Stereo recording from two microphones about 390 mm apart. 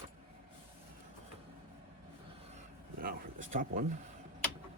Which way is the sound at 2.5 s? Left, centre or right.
Centre.